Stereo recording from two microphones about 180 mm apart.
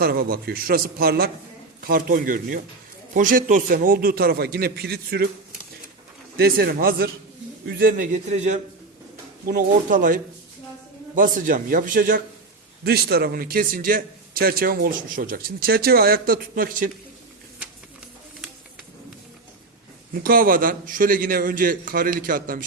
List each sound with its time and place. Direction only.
0.0 s a man's voice: 60° right (ahead or behind)
6.3 s a man's voice: 60° right (ahead or behind)
12.8 s a man's voice: 60° right (ahead or behind)
20.2 s a man's voice: 55° right (ahead or behind)